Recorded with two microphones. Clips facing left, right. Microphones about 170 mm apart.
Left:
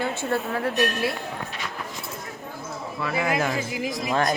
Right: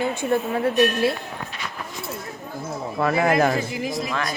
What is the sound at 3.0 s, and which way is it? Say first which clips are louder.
Speech: right 6 dB; 45° right (ahead or behind).